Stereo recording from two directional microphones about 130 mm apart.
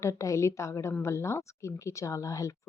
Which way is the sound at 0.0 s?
25° left (ahead or behind).